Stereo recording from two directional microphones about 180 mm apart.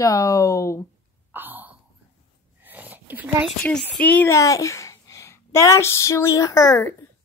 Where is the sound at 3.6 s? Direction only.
5° left (ahead or behind).